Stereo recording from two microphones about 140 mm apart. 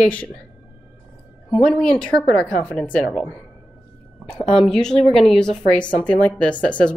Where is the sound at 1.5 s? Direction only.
5° left (ahead or behind).